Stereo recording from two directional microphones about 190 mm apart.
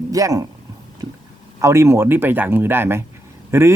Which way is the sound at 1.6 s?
15° right (ahead or behind).